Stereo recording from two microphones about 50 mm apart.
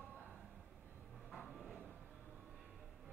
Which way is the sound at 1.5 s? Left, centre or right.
Centre.